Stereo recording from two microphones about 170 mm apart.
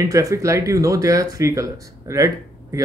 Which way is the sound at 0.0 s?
20° right (ahead or behind).